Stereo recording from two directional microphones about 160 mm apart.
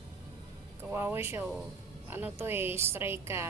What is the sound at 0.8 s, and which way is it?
A woman's voice, 15° right (ahead or behind).